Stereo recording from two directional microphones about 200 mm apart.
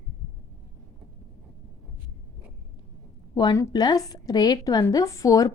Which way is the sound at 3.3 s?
20° left (ahead or behind).